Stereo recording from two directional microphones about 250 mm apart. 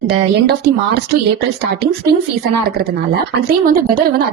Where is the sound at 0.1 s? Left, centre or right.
Right.